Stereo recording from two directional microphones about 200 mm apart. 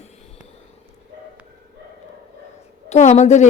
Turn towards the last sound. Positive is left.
turn(degrees=35)  # may be behind; listen again after turning